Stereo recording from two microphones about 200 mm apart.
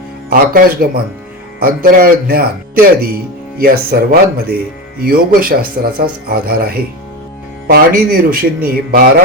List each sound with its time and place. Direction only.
0.3 s speech: 45° right (ahead or behind)
3.6 s speech: 50° right (ahead or behind)